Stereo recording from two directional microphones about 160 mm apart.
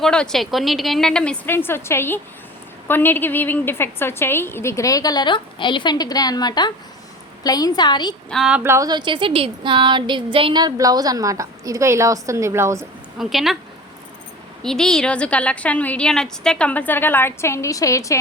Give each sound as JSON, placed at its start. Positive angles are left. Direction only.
{"t": 0.0, "sound": "a woman's voice", "side_deg": 5}
{"t": 8.3, "sound": "a woman's voice", "side_deg": -5}
{"t": 13.1, "sound": "a woman's voice", "side_deg": 0}
{"t": 14.6, "sound": "a woman's voice", "side_deg": 5}